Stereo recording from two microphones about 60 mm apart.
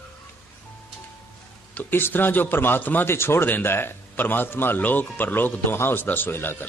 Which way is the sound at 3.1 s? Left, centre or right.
Left.